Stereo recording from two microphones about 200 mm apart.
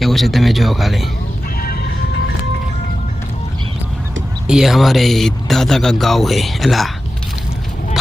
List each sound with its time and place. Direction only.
0.0 s speech: centre (ahead or behind)
1.5 s music: 50° left (ahead or behind)
4.4 s speech: centre (ahead or behind)